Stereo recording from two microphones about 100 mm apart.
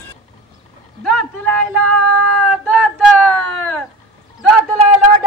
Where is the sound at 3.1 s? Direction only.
20° left (ahead or behind).